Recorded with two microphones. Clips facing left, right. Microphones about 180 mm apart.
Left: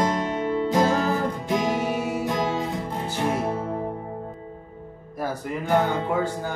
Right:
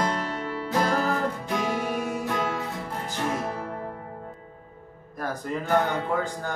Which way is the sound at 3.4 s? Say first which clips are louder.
Left 5 dB; 20° left (ahead or behind).